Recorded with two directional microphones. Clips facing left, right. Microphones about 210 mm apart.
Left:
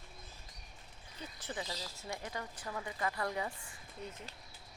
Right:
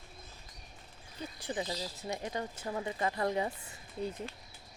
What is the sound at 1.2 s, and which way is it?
Speech, 15° right (ahead or behind).